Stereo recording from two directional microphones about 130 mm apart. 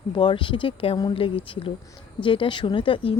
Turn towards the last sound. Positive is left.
turn(degrees=40)  # may be behind; listen again after turning